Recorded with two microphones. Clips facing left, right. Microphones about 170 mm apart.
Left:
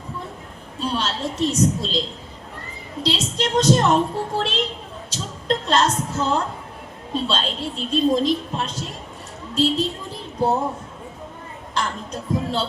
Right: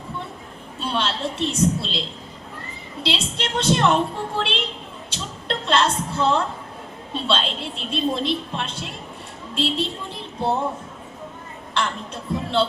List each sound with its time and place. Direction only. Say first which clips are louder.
0.8 s a woman's voice: even; 40° left (ahead or behind)
11.7 s a woman's voice: even; 40° left (ahead or behind)